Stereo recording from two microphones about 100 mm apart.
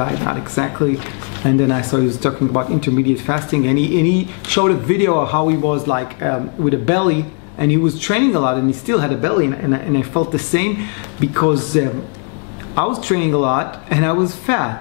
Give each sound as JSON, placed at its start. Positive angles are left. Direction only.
{"t": 0.0, "sound": "speech", "side_deg": 20}